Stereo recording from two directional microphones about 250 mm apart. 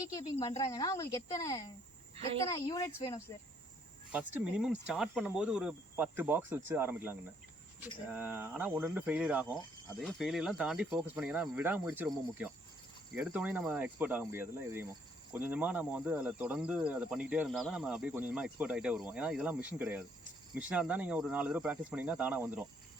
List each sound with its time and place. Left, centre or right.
0.1 s speech: centre
4.1 s speech: centre